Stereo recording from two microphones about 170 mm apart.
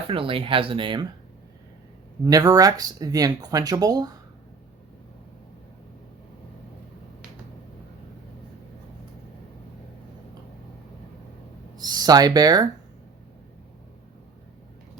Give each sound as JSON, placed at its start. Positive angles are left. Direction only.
{"t": 0.1, "sound": "speech", "side_deg": -30}
{"t": 2.2, "sound": "speech", "side_deg": -20}
{"t": 11.8, "sound": "speech", "side_deg": -25}